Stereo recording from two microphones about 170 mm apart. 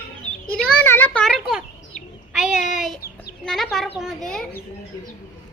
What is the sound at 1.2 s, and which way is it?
Bird, centre (ahead or behind).